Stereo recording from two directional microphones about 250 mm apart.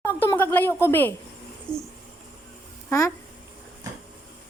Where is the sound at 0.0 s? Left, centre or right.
Centre.